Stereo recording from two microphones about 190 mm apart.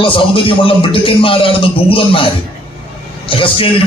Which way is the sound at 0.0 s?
25° left (ahead or behind).